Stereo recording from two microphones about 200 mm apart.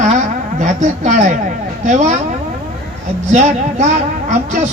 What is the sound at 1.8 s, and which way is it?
Speech, 35° right (ahead or behind).